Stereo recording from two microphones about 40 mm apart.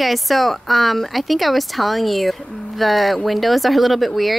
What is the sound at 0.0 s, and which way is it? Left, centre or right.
Speech, centre.